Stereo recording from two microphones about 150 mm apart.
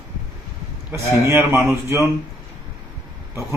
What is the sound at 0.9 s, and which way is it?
Speech, 15° right (ahead or behind).